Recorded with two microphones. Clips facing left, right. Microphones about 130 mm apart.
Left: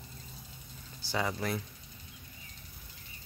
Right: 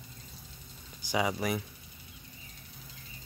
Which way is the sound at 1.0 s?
15° right (ahead or behind).